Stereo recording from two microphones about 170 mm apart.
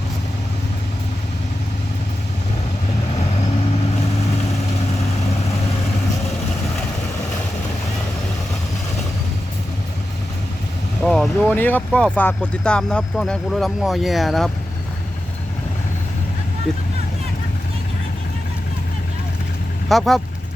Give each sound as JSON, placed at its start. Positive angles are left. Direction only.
{"t": 11.0, "sound": "speech", "side_deg": 5}
{"t": 16.7, "sound": "speech", "side_deg": 5}
{"t": 19.9, "sound": "speech", "side_deg": 0}